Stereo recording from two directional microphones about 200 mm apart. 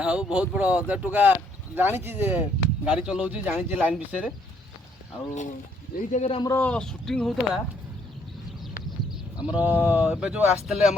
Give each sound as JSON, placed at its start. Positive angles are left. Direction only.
{"t": 0.0, "sound": "speech", "side_deg": -5}
{"t": 5.3, "sound": "speech", "side_deg": 40}
{"t": 6.3, "sound": "speech", "side_deg": 20}
{"t": 6.6, "sound": "speech", "side_deg": 5}
{"t": 9.4, "sound": "speech", "side_deg": -5}